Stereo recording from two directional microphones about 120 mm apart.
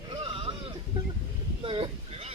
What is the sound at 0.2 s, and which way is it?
Sheep, 50° right (ahead or behind).